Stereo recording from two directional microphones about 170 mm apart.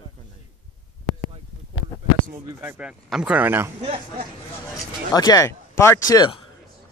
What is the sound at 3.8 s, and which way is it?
Speech, 35° right (ahead or behind).